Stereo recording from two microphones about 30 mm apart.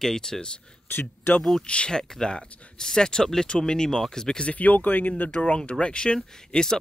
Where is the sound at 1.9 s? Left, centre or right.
Left.